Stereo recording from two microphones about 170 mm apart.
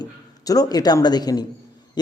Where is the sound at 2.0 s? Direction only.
25° left (ahead or behind).